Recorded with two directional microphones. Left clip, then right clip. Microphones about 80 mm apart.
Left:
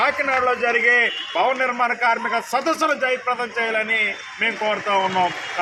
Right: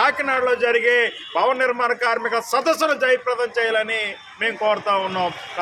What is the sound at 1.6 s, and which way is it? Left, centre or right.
A man's voice, right.